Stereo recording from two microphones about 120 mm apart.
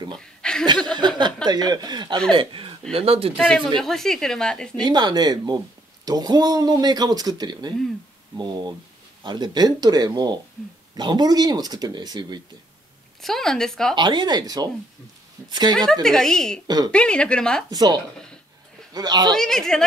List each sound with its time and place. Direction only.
0.2 s chuckle: 5° left (ahead or behind)
0.9 s speech: 40° right (ahead or behind)
3.3 s a woman's voice: 5° left (ahead or behind)
4.8 s speech: 35° right (ahead or behind)
13.2 s a woman's voice: 5° left (ahead or behind)
13.9 s speech: 40° right (ahead or behind)
15.9 s a woman's voice: 5° left (ahead or behind)
16.6 s speech: 35° right (ahead or behind)
16.9 s speech: 10° left (ahead or behind)
17.6 s speech: 35° right (ahead or behind)
19.3 s a woman's voice: 5° left (ahead or behind)